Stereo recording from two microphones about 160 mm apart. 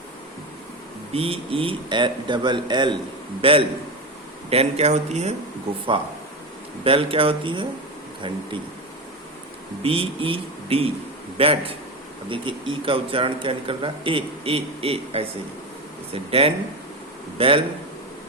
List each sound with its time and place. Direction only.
1.1 s speech: 35° right (ahead or behind)
6.8 s speech: 35° right (ahead or behind)
9.8 s speech: 35° right (ahead or behind)